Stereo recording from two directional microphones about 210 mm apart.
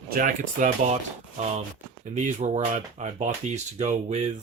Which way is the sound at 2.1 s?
35° right (ahead or behind).